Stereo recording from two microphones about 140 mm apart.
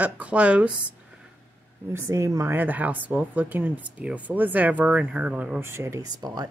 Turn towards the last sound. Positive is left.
turn(degrees=-25)  # may be behind; listen again after turning